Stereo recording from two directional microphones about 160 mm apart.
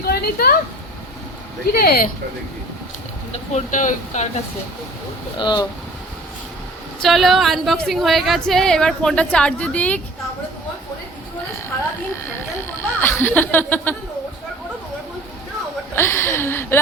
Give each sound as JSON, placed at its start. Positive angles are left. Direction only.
{"t": 0.0, "sound": "a sound", "side_deg": 70}
{"t": 1.6, "sound": "speech", "side_deg": 75}
{"t": 3.3, "sound": "speech", "side_deg": 50}
{"t": 5.4, "sound": "speech", "side_deg": 30}
{"t": 7.0, "sound": "a woman's voice", "side_deg": 0}
{"t": 13.0, "sound": "speech", "side_deg": 15}
{"t": 16.0, "sound": "a sound", "side_deg": 15}